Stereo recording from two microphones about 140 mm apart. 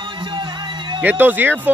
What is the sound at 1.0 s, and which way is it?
Speech, 10° right (ahead or behind).